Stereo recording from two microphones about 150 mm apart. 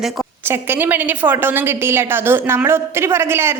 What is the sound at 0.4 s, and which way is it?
A woman's voice, 15° right (ahead or behind).